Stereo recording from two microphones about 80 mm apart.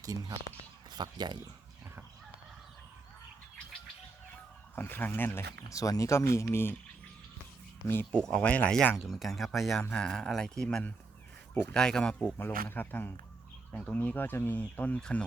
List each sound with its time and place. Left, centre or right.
0.0 s speech: right
0.9 s speech: right
4.7 s speech: left
7.8 s speech: left
8.3 s speech: centre
9.0 s speech: centre
12.4 s speech: left